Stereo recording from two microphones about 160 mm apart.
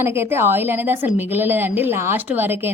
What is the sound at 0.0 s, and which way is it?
A woman's voice, 15° right (ahead or behind).